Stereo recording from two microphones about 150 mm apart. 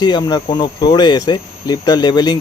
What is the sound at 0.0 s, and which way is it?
A man's voice, 30° left (ahead or behind).